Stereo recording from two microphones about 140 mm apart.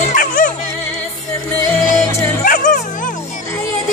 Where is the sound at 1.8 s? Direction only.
70° left (ahead or behind).